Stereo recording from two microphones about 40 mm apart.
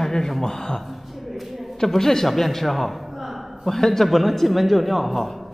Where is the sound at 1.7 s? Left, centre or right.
Centre.